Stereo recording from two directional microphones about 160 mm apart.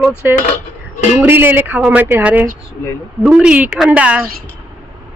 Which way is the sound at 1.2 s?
15° right (ahead or behind).